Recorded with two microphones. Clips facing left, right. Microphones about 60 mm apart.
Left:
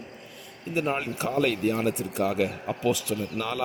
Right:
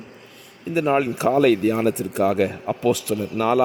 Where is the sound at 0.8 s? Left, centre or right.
Right.